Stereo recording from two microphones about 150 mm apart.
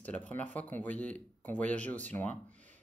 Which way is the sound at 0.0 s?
10° left (ahead or behind).